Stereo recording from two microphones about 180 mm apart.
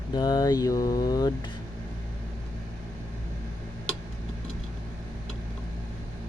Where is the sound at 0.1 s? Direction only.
20° left (ahead or behind).